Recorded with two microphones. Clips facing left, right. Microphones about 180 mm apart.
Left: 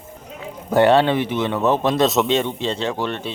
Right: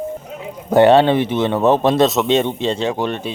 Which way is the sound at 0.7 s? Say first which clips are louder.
Right 4 dB; 20° right (ahead or behind).